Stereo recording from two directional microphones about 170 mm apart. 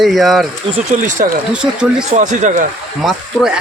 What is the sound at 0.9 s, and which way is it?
Speech, 45° right (ahead or behind).